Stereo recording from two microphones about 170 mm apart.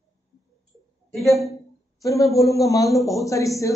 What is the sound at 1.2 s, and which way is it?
Speech, centre (ahead or behind).